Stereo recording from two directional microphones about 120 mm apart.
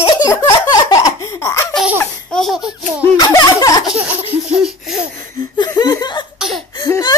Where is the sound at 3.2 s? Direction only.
30° left (ahead or behind).